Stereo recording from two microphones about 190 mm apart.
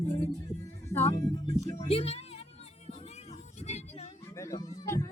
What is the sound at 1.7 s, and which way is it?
Speech, 30° left (ahead or behind).